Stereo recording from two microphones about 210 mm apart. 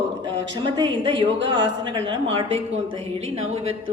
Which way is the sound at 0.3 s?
20° right (ahead or behind).